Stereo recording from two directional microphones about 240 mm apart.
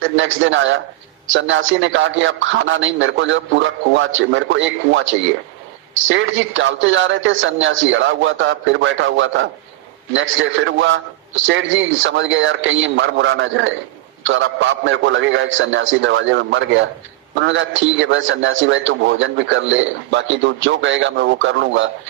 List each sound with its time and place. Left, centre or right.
0.2 s a man's voice: right